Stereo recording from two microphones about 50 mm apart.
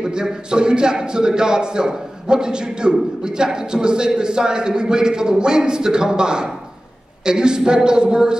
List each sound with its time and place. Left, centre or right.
0.0 s a man's voice: centre